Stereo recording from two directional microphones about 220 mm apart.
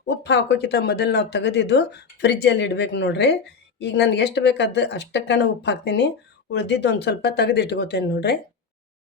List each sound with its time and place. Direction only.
0.0 s speech: 50° left (ahead or behind)